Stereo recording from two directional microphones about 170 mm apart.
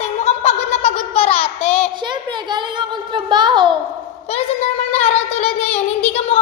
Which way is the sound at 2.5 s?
25° right (ahead or behind).